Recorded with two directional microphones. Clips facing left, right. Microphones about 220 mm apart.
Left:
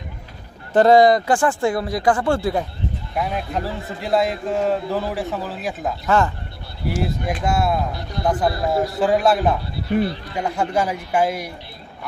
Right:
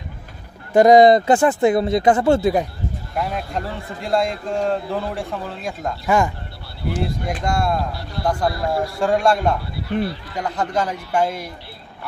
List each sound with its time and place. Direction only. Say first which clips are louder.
0.7 s speech: right 2 dB; 15° right (ahead or behind)
3.2 s a man's voice: left 1 dB; centre (ahead or behind)
6.0 s speech: even; 15° right (ahead or behind)
7.0 s a man's voice: left 1 dB; 5° left (ahead or behind)
7.9 s a man's voice: left 1 dB; 20° left (ahead or behind)
9.0 s a man's voice: even; 5° left (ahead or behind)